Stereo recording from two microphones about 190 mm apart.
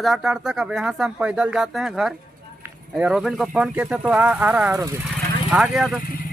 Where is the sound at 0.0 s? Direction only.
Centre (ahead or behind).